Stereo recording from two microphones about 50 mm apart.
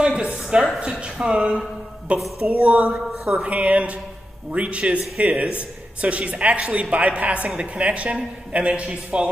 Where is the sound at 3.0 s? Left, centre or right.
Centre.